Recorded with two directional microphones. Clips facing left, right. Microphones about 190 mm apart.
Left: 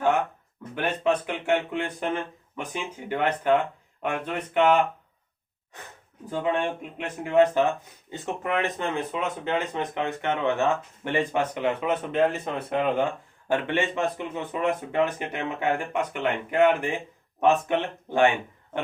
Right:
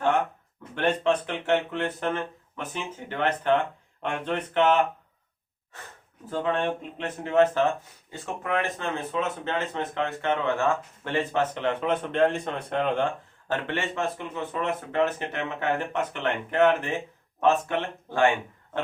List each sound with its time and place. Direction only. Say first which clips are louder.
0.8 s speech: right 1 dB; 10° left (ahead or behind)